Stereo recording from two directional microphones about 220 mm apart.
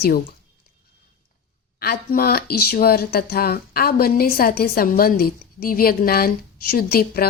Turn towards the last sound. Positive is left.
turn(degrees=45)  # may be behind; listen again after turning